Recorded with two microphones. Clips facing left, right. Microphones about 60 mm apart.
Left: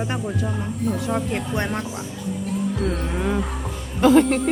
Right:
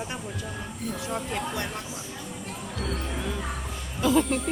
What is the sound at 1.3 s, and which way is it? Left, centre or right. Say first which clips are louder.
Speech: left 5 dB; left.